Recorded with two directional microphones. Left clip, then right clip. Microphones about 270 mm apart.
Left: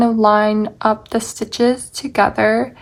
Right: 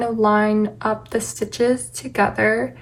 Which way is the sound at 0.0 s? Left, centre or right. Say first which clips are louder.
Left 5 dB; centre.